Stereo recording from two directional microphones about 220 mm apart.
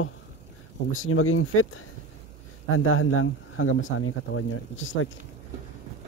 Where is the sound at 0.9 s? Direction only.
70° left (ahead or behind).